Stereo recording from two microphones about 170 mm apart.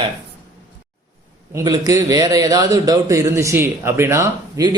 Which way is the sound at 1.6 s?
20° right (ahead or behind).